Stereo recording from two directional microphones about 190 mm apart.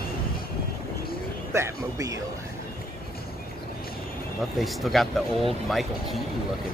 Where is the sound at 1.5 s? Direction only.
15° right (ahead or behind).